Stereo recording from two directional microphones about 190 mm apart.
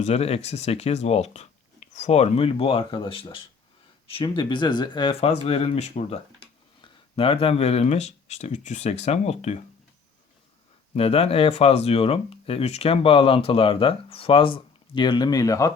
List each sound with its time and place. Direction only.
0.0 s speech: 35° left (ahead or behind)
10.9 s speech: 30° left (ahead or behind)